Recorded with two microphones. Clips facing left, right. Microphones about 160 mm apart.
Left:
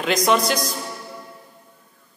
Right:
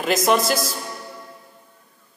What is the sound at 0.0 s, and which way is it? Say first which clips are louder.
Speech: even; 5° right (ahead or behind).